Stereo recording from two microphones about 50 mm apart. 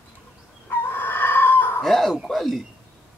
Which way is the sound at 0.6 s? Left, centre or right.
Left.